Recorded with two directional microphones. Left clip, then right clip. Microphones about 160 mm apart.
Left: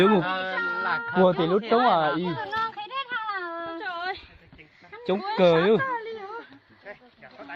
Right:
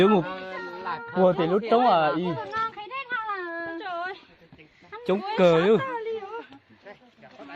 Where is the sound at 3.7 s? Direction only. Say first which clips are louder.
Left 1 dB; 90° left.